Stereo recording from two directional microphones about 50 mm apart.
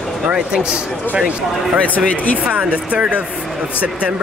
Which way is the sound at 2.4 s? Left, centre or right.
Right.